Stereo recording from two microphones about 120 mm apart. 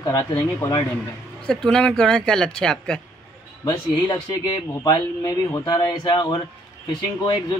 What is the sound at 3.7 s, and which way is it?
Speech, 35° left (ahead or behind).